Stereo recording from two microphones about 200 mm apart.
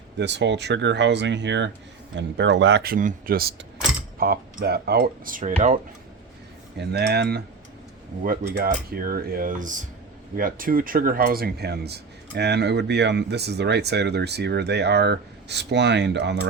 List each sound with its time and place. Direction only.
0.2 s speech: 60° right (ahead or behind); by 5.8 s 40° right (ahead or behind)
6.7 s speech: 55° right (ahead or behind)